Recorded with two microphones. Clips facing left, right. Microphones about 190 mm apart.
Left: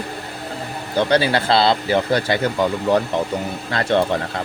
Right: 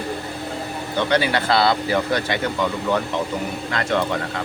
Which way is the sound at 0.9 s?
35° left (ahead or behind).